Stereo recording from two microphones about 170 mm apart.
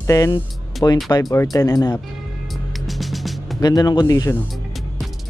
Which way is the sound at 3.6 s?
25° left (ahead or behind).